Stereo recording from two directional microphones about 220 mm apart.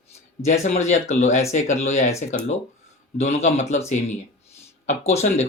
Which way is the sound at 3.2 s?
30° left (ahead or behind).